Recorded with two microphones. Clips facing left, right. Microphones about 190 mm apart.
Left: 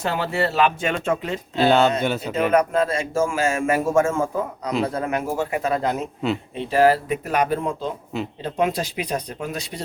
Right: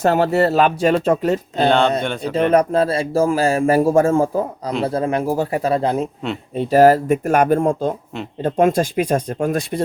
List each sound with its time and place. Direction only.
0.0 s speech: 45° right (ahead or behind)
1.6 s speech: 5° left (ahead or behind)
2.5 s speech: 35° right (ahead or behind)
6.6 s speech: 45° right (ahead or behind)